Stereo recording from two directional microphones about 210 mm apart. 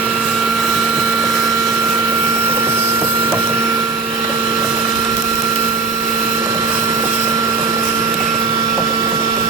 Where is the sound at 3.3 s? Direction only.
15° right (ahead or behind).